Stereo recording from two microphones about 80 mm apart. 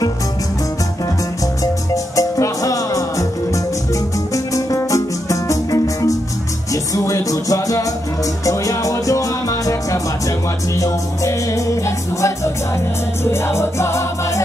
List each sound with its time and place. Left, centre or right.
2.1 s music: left